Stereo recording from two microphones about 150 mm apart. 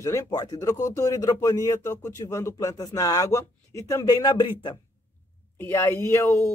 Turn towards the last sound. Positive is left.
turn(degrees=15)  # may be behind; listen again after turning